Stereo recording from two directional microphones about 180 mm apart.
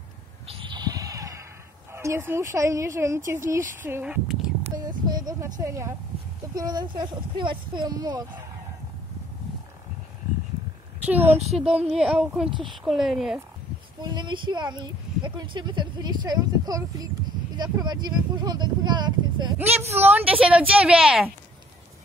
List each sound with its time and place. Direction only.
0.5 s sheep: 25° right (ahead or behind)
1.9 s speech: 15° right (ahead or behind)
5.0 s speech: 20° right (ahead or behind)
11.1 s speech: 10° right (ahead or behind)
14.0 s speech: 25° right (ahead or behind); by 21.3 s 5° right (ahead or behind)